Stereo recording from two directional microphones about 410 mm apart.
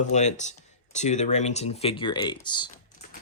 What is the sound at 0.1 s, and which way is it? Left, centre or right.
Speech, centre.